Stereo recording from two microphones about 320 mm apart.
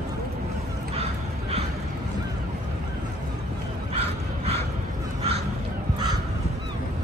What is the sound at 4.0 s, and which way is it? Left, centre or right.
Crow, centre.